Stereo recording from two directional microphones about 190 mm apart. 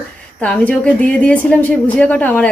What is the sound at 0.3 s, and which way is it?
A woman's voice, 5° left (ahead or behind).